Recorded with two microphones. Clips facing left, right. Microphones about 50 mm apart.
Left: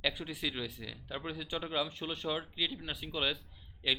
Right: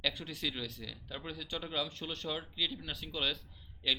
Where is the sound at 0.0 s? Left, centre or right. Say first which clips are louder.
Left 1 dB; centre.